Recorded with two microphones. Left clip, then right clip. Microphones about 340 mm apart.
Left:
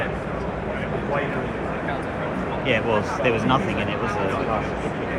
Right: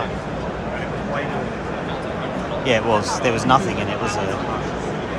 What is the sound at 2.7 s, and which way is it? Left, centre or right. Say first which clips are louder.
Speech: right 4 dB; centre.